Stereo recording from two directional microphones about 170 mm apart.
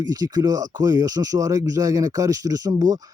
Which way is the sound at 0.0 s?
25° right (ahead or behind).